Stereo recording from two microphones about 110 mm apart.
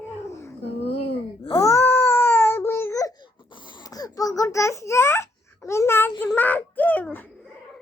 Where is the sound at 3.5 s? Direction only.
45° left (ahead or behind); by 7.3 s 15° left (ahead or behind).